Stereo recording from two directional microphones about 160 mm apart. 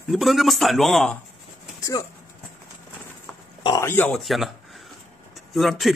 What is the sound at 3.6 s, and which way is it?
Speech, 20° left (ahead or behind).